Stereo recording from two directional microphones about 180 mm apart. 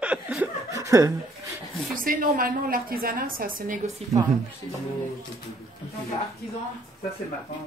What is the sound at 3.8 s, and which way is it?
Speech, 35° right (ahead or behind).